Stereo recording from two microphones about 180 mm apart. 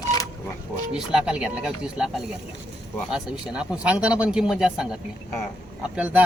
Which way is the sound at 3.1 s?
5° right (ahead or behind).